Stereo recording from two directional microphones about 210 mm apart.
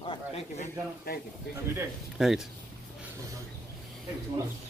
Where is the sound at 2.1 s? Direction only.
Centre (ahead or behind).